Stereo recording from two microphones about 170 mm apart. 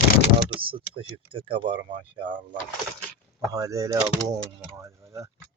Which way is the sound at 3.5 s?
20° right (ahead or behind).